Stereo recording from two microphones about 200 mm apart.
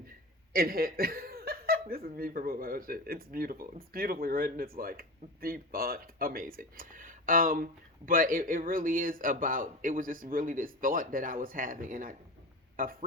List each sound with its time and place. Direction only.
0.5 s chuckle: 45° right (ahead or behind)
2.1 s speech: 45° right (ahead or behind)